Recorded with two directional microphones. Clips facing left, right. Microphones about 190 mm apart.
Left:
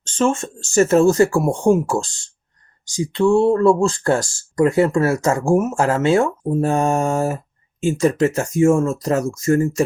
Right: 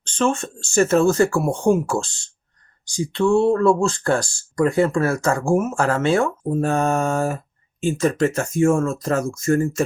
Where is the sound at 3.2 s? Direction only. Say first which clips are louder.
Left 2 dB; 35° left (ahead or behind).